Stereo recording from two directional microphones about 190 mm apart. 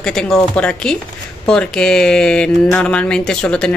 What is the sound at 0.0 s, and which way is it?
Speech, 5° left (ahead or behind).